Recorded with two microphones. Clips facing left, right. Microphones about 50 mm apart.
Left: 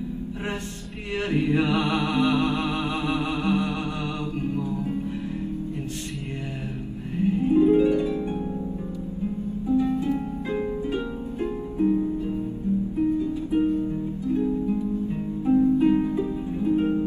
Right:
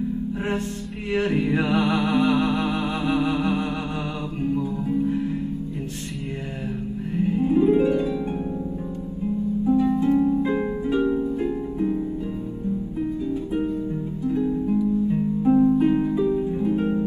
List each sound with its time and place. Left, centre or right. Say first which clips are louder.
1.1 s music: right 1 dB; right
4.4 s music: right 5 dB; left
7.2 s music: even; right
9.7 s harp: right 3 dB; right
14.2 s music: right 2 dB; right
15.0 s harp: right 4 dB; right